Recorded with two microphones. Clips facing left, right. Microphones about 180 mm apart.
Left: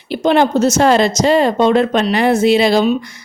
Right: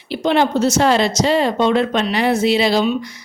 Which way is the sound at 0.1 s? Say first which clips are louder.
Left 3 dB; 45° left (ahead or behind).